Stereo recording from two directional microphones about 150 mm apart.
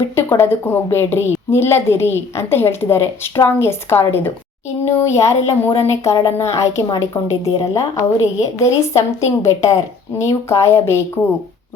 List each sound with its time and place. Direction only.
0.2 s a woman's voice: 15° left (ahead or behind)